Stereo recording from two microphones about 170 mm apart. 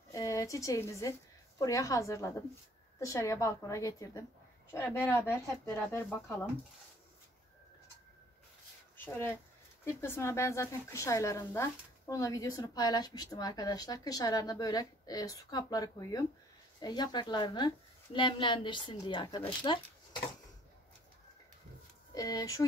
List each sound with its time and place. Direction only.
0.1 s a woman's voice: 20° left (ahead or behind)
8.9 s a woman's voice: 10° left (ahead or behind); by 20.2 s 30° left (ahead or behind)
22.1 s a woman's voice: 20° left (ahead or behind)